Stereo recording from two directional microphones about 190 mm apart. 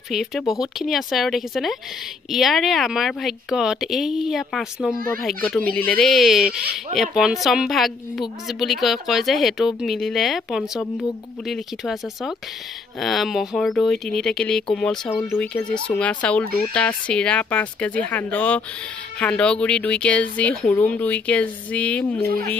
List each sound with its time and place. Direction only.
0.1 s a woman's voice: centre (ahead or behind)
22.2 s speech: 55° right (ahead or behind)